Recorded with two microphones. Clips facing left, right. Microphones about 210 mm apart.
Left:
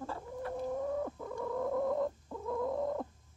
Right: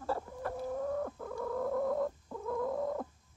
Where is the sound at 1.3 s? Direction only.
Centre (ahead or behind).